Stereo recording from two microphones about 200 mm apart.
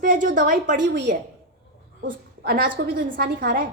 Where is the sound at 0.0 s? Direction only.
40° right (ahead or behind).